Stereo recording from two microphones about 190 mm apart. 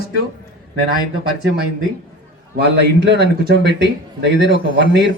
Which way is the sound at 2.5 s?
65° right (ahead or behind).